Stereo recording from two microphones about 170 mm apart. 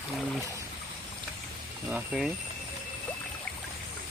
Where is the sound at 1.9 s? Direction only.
5° right (ahead or behind).